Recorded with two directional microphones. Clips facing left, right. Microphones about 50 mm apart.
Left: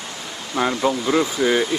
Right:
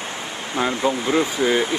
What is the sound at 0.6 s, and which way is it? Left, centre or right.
Speech, right.